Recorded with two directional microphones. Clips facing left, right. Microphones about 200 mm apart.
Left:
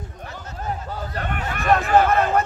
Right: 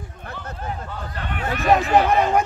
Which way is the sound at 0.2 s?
55° right (ahead or behind).